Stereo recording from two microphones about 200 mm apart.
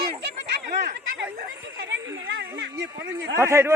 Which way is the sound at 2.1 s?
60° right (ahead or behind).